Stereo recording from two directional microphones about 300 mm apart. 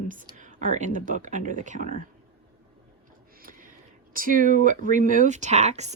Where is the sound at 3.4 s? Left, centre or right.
Right.